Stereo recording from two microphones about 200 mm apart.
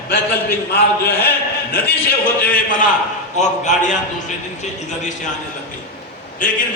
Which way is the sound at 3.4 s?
35° left (ahead or behind).